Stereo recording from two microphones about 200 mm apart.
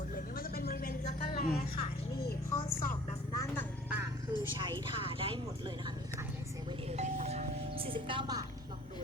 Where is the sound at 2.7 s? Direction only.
45° left (ahead or behind).